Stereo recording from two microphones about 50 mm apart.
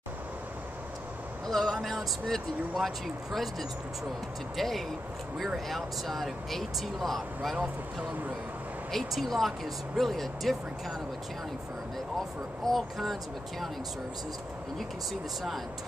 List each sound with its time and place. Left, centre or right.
1.5 s speech: centre
7.5 s speech: right
8.9 s speech: centre
12.6 s speech: centre